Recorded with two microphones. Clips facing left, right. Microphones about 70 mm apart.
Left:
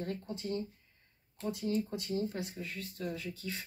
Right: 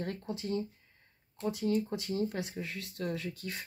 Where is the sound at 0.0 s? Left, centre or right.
Right.